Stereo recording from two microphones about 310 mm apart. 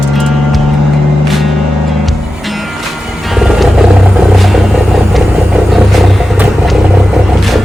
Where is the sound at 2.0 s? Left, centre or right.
Centre.